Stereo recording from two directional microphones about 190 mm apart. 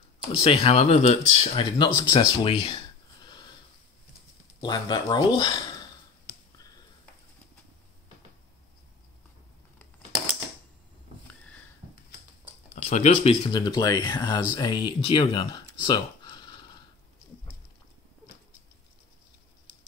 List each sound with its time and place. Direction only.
0.4 s speech: 30° left (ahead or behind)
4.6 s speech: 20° left (ahead or behind)
12.7 s speech: 35° left (ahead or behind)